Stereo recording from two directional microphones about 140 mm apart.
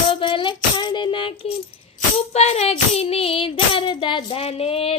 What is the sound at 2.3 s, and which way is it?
Child singing, 50° left (ahead or behind).